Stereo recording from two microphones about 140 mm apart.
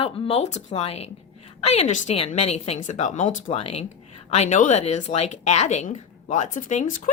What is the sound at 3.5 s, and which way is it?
Speech, 50° left (ahead or behind).